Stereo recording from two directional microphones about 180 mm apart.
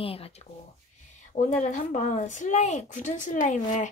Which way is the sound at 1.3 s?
45° left (ahead or behind).